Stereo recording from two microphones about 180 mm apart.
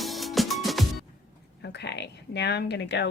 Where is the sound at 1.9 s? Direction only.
70° left (ahead or behind).